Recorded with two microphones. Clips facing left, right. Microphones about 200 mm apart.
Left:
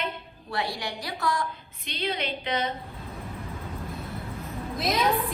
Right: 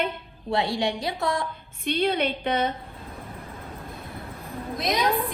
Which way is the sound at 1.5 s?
55° right (ahead or behind).